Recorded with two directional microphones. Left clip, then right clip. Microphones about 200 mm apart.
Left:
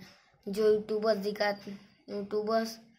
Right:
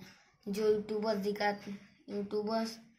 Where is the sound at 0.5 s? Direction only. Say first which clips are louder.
Left 4 dB; 30° left (ahead or behind).